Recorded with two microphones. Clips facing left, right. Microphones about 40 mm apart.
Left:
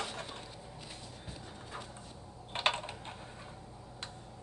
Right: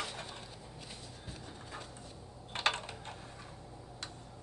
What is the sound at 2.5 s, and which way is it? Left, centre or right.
Typing, left.